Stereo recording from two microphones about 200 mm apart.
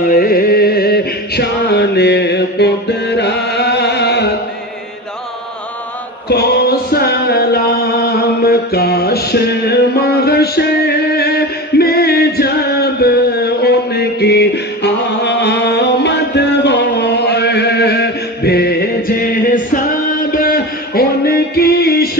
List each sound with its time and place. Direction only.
0.1 s music: 45° left (ahead or behind)
6.2 s music: 50° left (ahead or behind)